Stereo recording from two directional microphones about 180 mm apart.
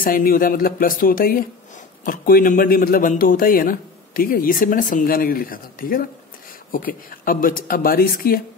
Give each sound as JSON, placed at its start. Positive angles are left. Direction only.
{"t": 0.0, "sound": "speech", "side_deg": 55}